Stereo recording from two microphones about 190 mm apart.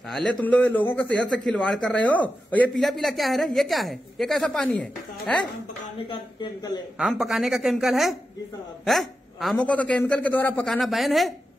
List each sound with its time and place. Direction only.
0.0 s a man's voice: centre (ahead or behind)
5.9 s speech: 25° left (ahead or behind)
7.0 s a man's voice: centre (ahead or behind)